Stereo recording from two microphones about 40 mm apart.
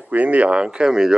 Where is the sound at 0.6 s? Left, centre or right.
Right.